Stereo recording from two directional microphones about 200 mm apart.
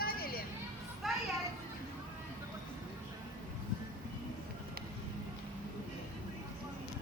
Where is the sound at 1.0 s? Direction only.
Centre (ahead or behind).